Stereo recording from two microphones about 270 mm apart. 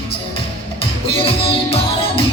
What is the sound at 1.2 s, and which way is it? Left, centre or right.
Music, left.